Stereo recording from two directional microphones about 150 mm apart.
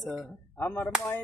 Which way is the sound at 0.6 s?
15° left (ahead or behind).